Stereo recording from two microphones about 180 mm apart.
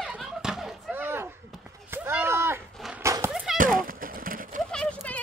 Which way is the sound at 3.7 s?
50° right (ahead or behind).